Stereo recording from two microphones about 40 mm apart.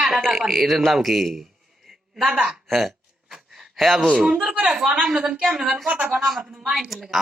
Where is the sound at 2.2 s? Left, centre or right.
Centre.